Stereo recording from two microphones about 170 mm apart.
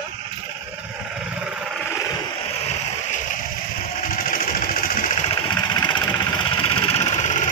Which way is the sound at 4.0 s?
55° left (ahead or behind).